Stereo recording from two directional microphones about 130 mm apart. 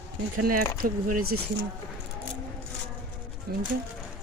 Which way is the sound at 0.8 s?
90° right.